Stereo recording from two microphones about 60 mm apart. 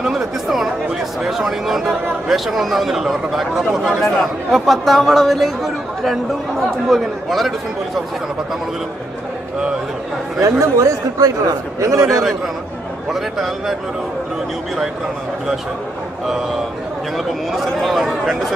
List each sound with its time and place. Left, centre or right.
0.0 s a man's voice: centre
10.4 s a man's voice: right
13.1 s a man's voice: centre
17.5 s a man's voice: centre